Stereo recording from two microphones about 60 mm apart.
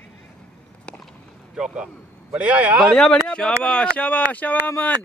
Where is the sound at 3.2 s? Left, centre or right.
Centre.